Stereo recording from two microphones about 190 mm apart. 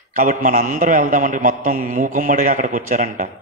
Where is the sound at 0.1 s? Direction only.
40° right (ahead or behind).